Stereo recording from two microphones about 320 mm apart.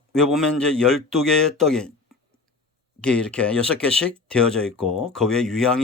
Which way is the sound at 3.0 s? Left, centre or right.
Centre.